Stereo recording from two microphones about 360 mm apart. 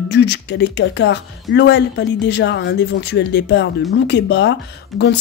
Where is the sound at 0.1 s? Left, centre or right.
Left.